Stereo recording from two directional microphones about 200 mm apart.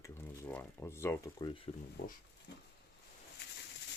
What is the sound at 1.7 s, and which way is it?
Speech, 30° left (ahead or behind).